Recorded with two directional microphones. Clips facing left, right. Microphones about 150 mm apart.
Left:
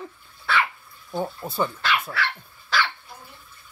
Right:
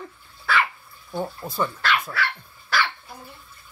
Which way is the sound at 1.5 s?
10° left (ahead or behind).